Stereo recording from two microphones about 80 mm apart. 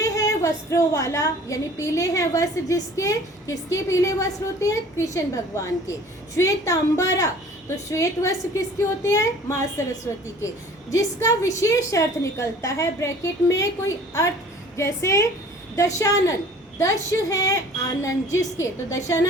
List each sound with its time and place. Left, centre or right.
0.0 s a woman's voice: left
10.9 s a woman's voice: left